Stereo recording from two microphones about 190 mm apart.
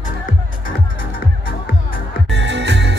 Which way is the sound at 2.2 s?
65° right (ahead or behind).